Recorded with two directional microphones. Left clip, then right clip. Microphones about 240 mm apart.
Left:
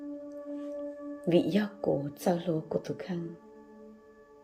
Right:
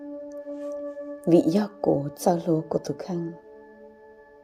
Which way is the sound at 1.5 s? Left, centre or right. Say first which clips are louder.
Right 7 dB; right.